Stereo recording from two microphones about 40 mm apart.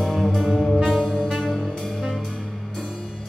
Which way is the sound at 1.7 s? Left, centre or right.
Centre.